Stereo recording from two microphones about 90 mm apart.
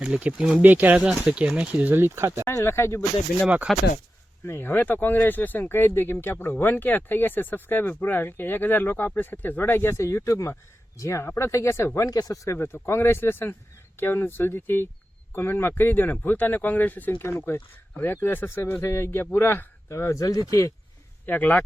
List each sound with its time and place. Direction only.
0.0 s speech: 10° right (ahead or behind)
0.9 s speech: 5° right (ahead or behind); by 2.4 s 30° right (ahead or behind)
2.4 s speech: 40° left (ahead or behind)
2.6 s speech: 30° left (ahead or behind)
3.7 s speech: centre (ahead or behind)
4.4 s speech: 25° left (ahead or behind); by 12.4 s 45° left (ahead or behind)
12.5 s speech: 25° left (ahead or behind)
21.2 s speech: 20° left (ahead or behind)